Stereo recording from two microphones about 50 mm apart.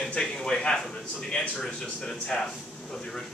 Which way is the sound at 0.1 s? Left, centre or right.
Centre.